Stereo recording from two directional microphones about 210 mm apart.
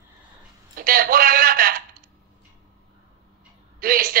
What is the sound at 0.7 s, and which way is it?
Speech, 45° right (ahead or behind).